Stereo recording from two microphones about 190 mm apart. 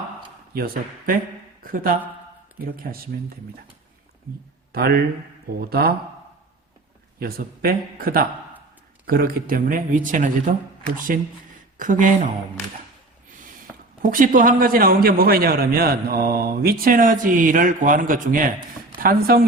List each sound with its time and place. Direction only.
0.5 s a man's voice: 50° right (ahead or behind)
4.7 s a man's voice: 55° right (ahead or behind)
7.2 s a man's voice: 55° right (ahead or behind)
11.8 s a man's voice: 45° right (ahead or behind)
14.0 s a man's voice: 45° right (ahead or behind)